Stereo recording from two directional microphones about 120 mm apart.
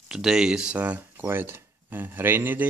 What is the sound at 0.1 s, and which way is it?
Speech, 5° right (ahead or behind).